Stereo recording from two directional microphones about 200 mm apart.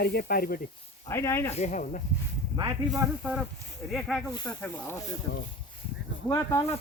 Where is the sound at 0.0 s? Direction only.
50° left (ahead or behind).